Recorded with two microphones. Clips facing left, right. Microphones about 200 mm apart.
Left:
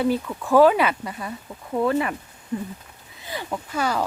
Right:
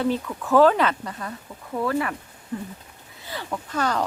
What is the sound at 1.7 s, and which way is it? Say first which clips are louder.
Speech: left 3 dB; 20° left (ahead or behind).